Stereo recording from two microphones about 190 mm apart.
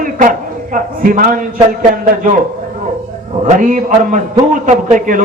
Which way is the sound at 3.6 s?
40° right (ahead or behind).